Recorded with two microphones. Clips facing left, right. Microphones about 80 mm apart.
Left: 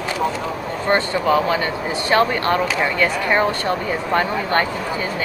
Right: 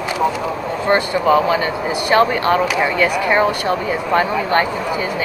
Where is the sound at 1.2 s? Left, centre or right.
Centre.